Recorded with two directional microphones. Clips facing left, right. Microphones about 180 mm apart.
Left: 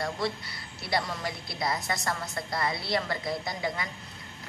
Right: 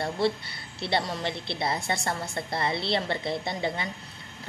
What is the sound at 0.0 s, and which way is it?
A woman's voice, 30° right (ahead or behind).